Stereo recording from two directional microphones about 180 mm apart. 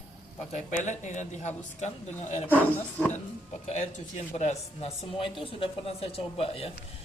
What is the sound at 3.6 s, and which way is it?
Speech, 40° left (ahead or behind).